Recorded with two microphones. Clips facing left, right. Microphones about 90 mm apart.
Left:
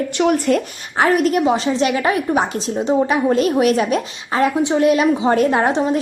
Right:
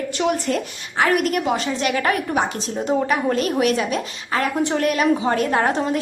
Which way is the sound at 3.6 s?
40° left (ahead or behind).